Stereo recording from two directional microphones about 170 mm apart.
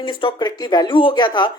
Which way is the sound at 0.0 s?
30° left (ahead or behind).